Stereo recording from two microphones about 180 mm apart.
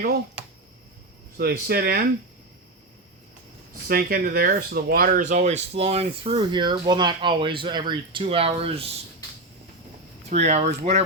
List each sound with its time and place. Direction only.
0.0 s speech: 60° right (ahead or behind)
3.8 s speech: 55° right (ahead or behind); by 8.7 s 30° right (ahead or behind)
10.2 s speech: 40° right (ahead or behind)